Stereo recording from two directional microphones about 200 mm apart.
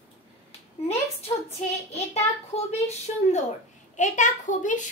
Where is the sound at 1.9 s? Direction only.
30° left (ahead or behind).